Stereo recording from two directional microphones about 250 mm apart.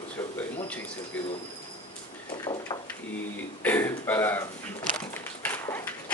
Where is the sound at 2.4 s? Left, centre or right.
Centre.